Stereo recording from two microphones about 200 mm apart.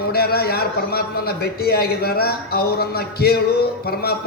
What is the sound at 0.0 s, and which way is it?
A man's voice, 50° left (ahead or behind).